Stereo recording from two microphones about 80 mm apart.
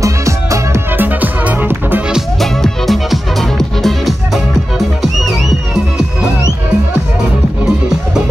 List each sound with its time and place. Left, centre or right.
0.0 s music: right
0.9 s music: right
2.4 s music: centre